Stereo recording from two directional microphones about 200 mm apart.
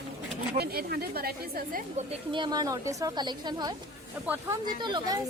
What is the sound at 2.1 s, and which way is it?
A woman's voice, 25° right (ahead or behind).